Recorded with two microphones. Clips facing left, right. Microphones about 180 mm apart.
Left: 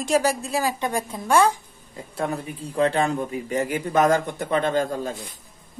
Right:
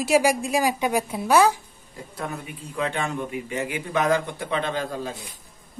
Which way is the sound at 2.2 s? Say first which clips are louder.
Left 6 dB; 35° left (ahead or behind).